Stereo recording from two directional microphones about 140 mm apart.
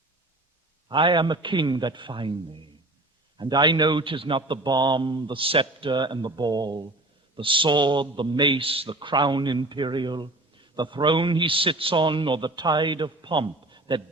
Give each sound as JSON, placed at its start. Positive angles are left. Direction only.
{"t": 0.9, "sound": "a man's voice", "side_deg": -35}